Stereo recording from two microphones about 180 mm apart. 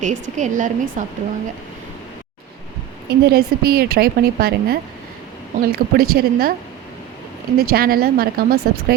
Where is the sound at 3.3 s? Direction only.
60° right (ahead or behind).